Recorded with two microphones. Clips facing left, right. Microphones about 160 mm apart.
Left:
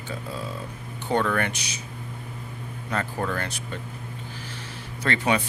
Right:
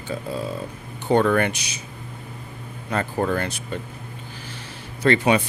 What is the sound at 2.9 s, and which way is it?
Speech, 25° right (ahead or behind).